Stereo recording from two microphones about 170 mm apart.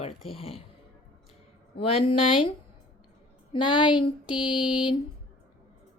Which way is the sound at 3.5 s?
30° left (ahead or behind).